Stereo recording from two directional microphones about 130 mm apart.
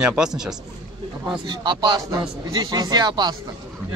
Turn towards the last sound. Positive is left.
turn(degrees=-35)  # may be behind; listen again after turning